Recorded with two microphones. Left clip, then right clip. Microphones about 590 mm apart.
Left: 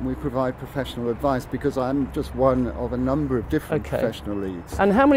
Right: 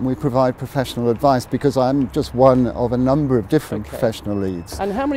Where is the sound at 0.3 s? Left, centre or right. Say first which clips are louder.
Right 8 dB; right.